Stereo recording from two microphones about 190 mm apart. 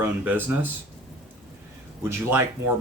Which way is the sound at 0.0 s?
10° right (ahead or behind).